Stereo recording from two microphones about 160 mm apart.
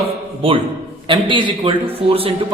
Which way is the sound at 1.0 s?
30° right (ahead or behind).